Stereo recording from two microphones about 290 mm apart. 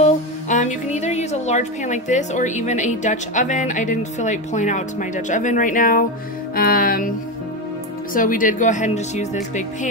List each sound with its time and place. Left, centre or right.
0.0 s a woman's voice: left
6.5 s music: left
8.1 s a woman's voice: left